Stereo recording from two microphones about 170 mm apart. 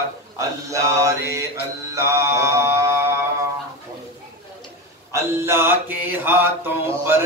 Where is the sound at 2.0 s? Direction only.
15° right (ahead or behind).